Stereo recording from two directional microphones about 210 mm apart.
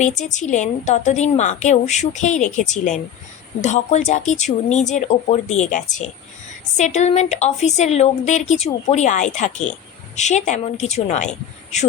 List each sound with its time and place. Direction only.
0.0 s a woman's voice: 35° left (ahead or behind)